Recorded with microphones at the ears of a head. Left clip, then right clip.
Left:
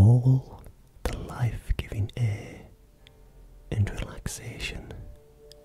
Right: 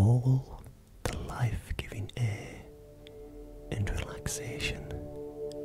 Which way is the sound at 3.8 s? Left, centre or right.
Centre.